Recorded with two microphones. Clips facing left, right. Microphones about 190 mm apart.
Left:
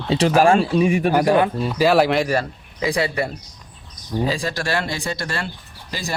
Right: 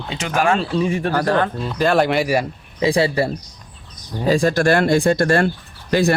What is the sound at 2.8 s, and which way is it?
Speech, 30° right (ahead or behind).